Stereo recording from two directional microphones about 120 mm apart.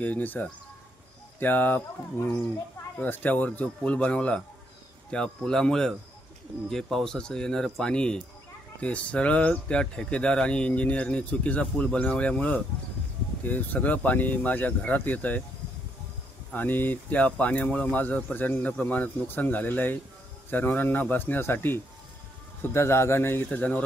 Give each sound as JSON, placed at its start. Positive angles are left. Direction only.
{"t": 0.0, "sound": "speech", "side_deg": 15}
{"t": 16.5, "sound": "a man's voice", "side_deg": 15}